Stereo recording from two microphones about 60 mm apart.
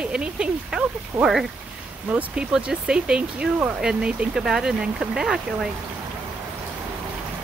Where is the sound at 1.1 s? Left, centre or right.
Right.